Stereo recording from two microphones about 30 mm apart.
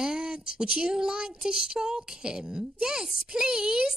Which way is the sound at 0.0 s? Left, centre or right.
Right.